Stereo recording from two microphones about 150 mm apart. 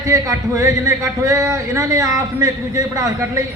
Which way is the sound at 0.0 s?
20° right (ahead or behind).